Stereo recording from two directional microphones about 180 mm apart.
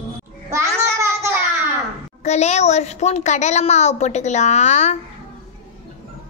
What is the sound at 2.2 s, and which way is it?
A woman's voice, 40° left (ahead or behind).